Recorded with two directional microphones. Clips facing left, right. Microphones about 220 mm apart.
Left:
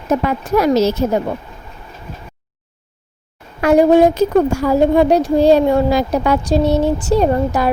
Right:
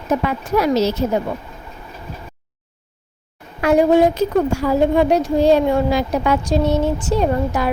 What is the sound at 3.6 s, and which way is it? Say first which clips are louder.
A woman's voice: left 3 dB; 40° left (ahead or behind).